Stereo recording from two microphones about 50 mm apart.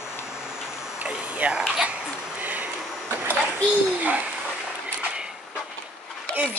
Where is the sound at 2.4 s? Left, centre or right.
Right.